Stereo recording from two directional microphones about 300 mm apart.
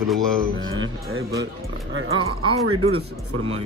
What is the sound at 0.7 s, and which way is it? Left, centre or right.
Speech, right.